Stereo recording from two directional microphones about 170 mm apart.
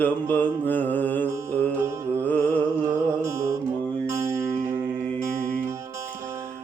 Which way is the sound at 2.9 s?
15° right (ahead or behind).